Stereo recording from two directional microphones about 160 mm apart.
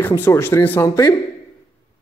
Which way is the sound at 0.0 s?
15° left (ahead or behind).